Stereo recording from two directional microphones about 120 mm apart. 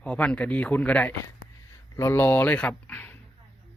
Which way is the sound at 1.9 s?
20° left (ahead or behind).